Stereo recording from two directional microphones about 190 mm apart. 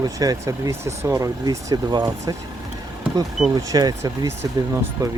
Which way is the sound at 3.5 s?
20° right (ahead or behind).